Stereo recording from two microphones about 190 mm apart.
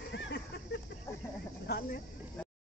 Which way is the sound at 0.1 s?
70° left (ahead or behind).